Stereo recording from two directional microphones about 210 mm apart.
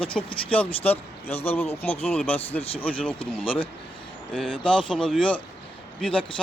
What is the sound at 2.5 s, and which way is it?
Speech, 25° left (ahead or behind).